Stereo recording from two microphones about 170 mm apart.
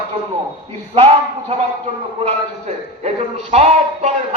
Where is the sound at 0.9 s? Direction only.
35° right (ahead or behind).